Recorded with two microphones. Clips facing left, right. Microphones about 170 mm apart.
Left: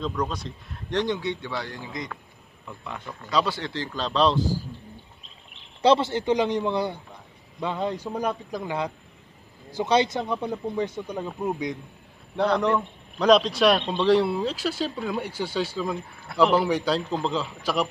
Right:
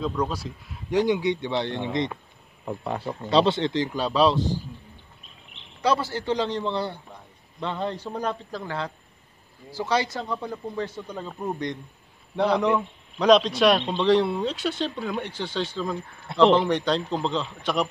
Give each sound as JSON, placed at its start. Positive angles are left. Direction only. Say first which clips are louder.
{"t": 0.0, "sound": "a man's voice", "louder": "right 2 dB", "side_deg": -5}
{"t": 2.6, "sound": "speech", "louder": "right 8 dB", "side_deg": -40}
{"t": 5.8, "sound": "a man's voice", "louder": "left 4 dB", "side_deg": 25}